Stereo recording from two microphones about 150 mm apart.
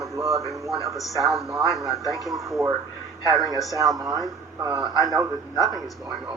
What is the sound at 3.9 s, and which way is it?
Speech, 25° right (ahead or behind).